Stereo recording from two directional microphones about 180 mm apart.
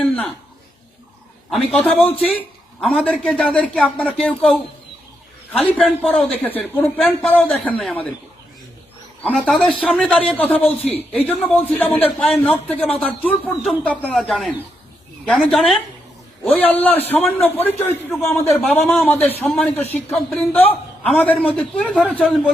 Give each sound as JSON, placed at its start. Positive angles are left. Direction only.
{"t": 1.5, "sound": "a man's voice", "side_deg": 5}
{"t": 9.2, "sound": "a man's voice", "side_deg": 5}